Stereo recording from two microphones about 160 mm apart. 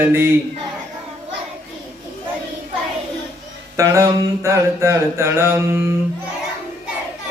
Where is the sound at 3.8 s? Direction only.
20° right (ahead or behind).